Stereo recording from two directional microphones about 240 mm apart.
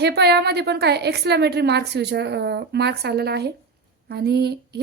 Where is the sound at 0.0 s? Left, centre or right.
Right.